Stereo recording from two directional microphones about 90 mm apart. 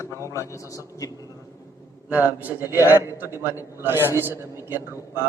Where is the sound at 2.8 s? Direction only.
35° left (ahead or behind).